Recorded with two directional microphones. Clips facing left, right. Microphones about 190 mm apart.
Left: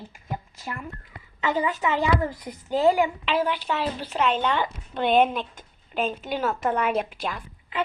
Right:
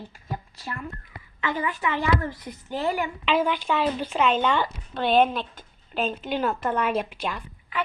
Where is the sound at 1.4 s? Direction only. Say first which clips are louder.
Left 3 dB; 15° left (ahead or behind).